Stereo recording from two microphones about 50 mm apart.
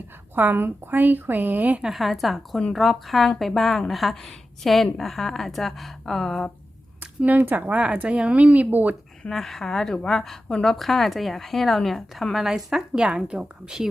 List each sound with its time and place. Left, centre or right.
0.3 s speech: right
1.8 s a woman's voice: centre
7.0 s speech: right
9.3 s a woman's voice: centre